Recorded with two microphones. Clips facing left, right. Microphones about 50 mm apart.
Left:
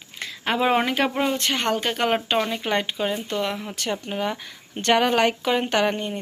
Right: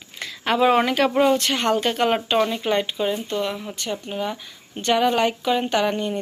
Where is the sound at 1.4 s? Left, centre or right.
Left.